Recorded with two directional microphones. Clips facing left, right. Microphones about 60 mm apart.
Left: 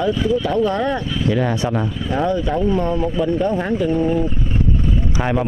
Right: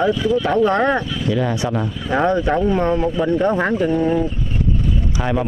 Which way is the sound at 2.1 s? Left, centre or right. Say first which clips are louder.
Right 3 dB; right.